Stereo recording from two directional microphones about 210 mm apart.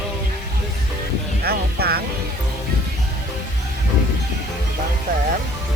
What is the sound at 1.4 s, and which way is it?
Music, 50° right (ahead or behind).